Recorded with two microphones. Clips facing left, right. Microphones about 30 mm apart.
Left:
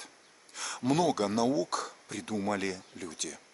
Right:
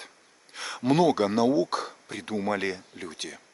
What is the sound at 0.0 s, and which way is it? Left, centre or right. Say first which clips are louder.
Speech: right 3 dB; right.